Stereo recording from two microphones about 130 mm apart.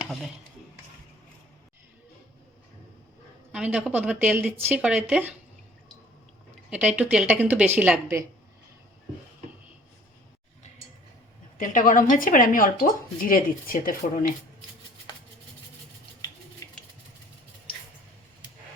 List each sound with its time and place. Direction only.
0.0 s speech: centre (ahead or behind)
3.5 s a woman's voice: 10° right (ahead or behind)
6.7 s a woman's voice: 10° right (ahead or behind)
11.5 s speech: 85° left